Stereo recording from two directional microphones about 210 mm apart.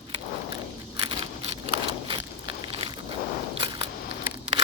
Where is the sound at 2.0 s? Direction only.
25° right (ahead or behind).